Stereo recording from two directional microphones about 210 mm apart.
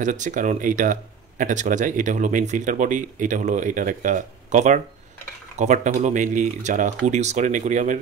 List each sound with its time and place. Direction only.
0.0 s speech: 35° right (ahead or behind)